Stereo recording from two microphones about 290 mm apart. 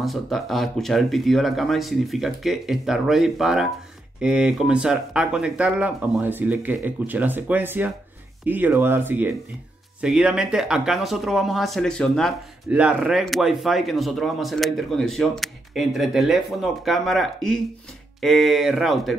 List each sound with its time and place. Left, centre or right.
0.0 s speech: centre